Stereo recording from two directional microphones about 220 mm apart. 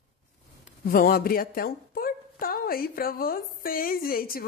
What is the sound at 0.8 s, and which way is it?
A woman's voice, 40° left (ahead or behind).